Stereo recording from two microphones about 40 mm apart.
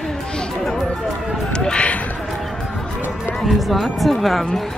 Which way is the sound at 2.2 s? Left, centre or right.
Centre.